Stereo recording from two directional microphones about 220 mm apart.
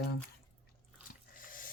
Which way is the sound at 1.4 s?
40° left (ahead or behind).